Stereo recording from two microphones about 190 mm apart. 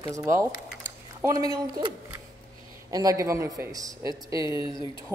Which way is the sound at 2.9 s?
20° right (ahead or behind).